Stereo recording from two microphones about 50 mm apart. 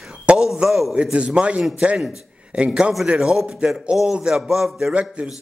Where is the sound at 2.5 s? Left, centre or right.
Centre.